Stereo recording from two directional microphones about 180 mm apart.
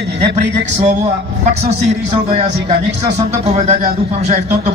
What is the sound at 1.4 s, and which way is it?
Speech, 35° right (ahead or behind).